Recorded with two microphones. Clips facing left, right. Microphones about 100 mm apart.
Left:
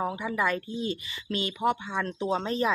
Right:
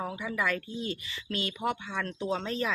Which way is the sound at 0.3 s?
25° left (ahead or behind).